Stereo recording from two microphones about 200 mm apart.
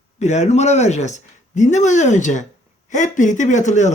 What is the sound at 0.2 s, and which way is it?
Speech, 35° left (ahead or behind).